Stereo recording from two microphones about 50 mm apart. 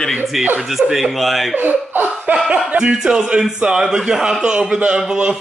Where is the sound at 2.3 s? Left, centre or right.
Centre.